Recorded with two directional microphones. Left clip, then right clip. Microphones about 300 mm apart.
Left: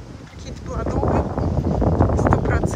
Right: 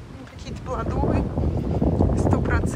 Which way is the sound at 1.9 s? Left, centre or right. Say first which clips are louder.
Left 4 dB; right.